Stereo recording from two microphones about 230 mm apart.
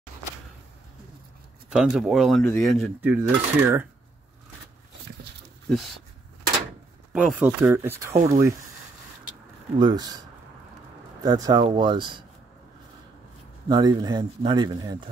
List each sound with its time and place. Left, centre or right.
1.7 s speech: centre
5.7 s speech: centre
7.1 s a man's voice: centre
9.8 s speech: centre
11.2 s speech: centre
13.7 s a man's voice: centre